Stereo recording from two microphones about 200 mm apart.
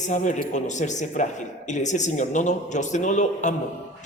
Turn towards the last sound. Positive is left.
turn(degrees=35)  # may be behind; listen again after turning